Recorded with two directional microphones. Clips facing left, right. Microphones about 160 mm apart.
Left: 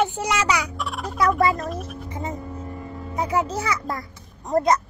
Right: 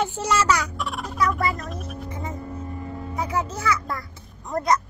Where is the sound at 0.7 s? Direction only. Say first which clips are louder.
Left 1 dB; centre (ahead or behind).